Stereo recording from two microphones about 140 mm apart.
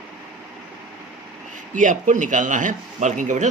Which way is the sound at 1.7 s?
65° right (ahead or behind).